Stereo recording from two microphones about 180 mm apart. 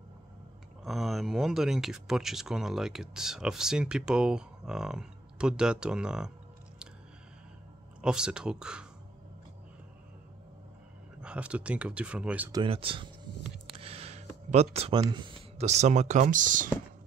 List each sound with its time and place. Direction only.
0.8 s speech: centre (ahead or behind)
8.0 s speech: 5° right (ahead or behind)
11.1 s speech: 5° right (ahead or behind)
12.4 s speech: 25° right (ahead or behind)
13.7 s a sound: 35° right (ahead or behind)
15.0 s speech: 25° right (ahead or behind); by 16.6 s 45° right (ahead or behind)